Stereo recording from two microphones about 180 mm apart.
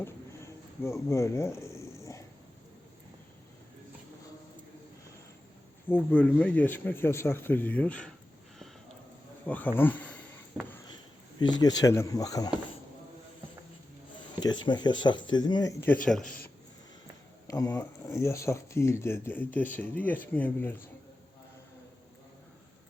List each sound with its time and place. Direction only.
0.9 s a sound: 15° left (ahead or behind)
5.9 s speech: 10° left (ahead or behind)
9.7 s speech: 10° left (ahead or behind)
11.3 s speech: 25° left (ahead or behind)
14.3 s speech: 25° left (ahead or behind)
16.0 s speech: 5° left (ahead or behind)
17.5 s speech: 20° left (ahead or behind)